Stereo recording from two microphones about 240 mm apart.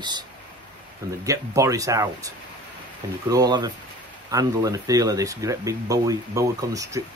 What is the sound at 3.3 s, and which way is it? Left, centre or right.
Speech, centre.